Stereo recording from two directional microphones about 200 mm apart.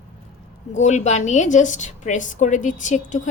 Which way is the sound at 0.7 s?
35° left (ahead or behind).